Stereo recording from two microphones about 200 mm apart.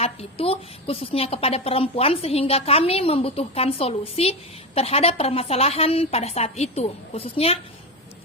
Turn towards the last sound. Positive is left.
turn(degrees=30)  # may be behind; listen again after turning